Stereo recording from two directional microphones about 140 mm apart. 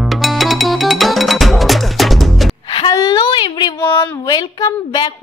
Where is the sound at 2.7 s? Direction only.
30° left (ahead or behind).